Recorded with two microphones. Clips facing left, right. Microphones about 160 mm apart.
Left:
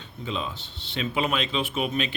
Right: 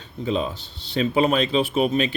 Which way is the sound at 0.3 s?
40° right (ahead or behind).